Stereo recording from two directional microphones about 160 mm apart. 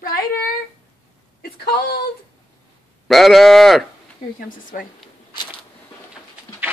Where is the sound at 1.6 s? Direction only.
80° left.